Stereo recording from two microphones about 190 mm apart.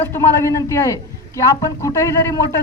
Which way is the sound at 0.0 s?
15° left (ahead or behind).